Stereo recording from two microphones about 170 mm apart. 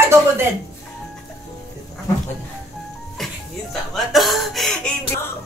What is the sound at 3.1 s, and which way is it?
Speech, centre (ahead or behind).